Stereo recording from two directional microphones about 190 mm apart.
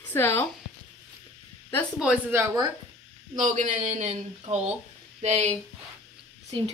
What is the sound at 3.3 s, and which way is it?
Speech, 40° right (ahead or behind).